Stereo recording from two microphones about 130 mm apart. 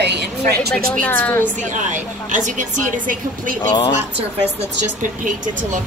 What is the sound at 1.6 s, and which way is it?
Speech, 75° right (ahead or behind).